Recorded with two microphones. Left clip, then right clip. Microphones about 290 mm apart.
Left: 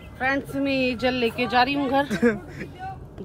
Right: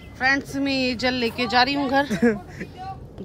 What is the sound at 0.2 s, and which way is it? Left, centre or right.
Speech, centre.